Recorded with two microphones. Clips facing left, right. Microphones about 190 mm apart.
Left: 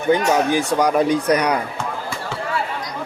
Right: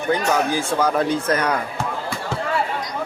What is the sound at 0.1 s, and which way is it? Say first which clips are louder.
Speech: left 4 dB; 20° left (ahead or behind).